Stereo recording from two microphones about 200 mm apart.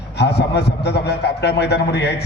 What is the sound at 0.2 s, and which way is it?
A man's voice, 55° left (ahead or behind).